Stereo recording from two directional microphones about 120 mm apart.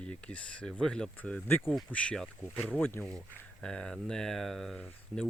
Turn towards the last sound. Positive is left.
turn(degrees=5)  # may be behind; listen again after turning